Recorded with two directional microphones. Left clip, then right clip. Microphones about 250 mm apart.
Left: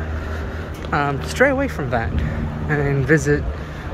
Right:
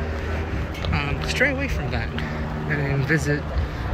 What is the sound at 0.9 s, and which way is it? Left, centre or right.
Speech, centre.